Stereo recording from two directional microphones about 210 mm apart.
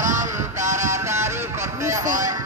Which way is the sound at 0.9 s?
15° right (ahead or behind).